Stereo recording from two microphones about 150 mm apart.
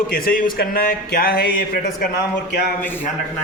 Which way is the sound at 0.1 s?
75° left (ahead or behind).